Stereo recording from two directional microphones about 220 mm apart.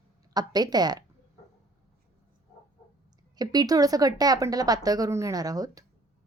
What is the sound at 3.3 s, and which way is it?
Speech, 15° right (ahead or behind).